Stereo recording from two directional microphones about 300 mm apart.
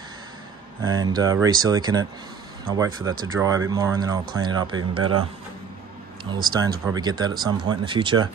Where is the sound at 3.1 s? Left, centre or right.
Centre.